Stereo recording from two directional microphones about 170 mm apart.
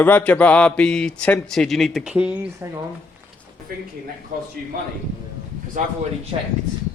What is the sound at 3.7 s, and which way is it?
Speech, 60° right (ahead or behind).